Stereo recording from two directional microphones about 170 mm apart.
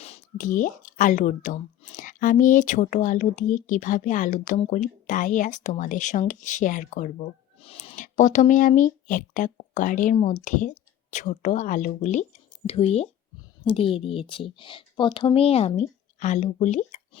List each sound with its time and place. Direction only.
0.3 s speech: 50° left (ahead or behind); by 7.9 s 35° left (ahead or behind)
7.9 s speech: 45° left (ahead or behind)